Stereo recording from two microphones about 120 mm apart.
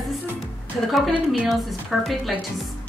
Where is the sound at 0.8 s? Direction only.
Centre (ahead or behind).